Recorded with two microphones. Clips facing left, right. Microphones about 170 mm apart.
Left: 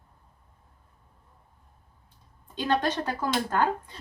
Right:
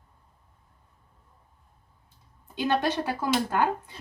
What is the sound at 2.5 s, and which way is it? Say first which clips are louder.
Speech: right 1 dB; 10° right (ahead or behind).